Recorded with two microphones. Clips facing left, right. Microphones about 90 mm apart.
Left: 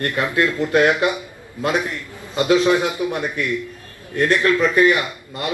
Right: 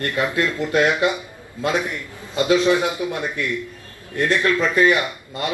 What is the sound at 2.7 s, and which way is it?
Speech, 20° right (ahead or behind).